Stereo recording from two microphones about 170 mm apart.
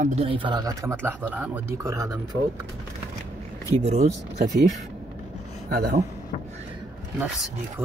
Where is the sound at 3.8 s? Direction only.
40° right (ahead or behind).